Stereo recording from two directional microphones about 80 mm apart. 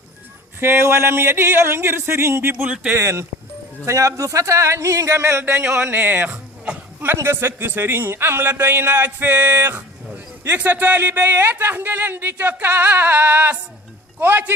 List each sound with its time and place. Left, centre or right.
0.6 s speech: right
2.6 s a man's voice: centre
3.0 s speech: right
5.9 s speech: right